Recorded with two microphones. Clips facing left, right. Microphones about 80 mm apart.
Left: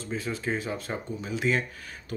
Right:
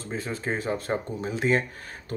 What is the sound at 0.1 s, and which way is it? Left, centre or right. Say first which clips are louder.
Speech: even; right.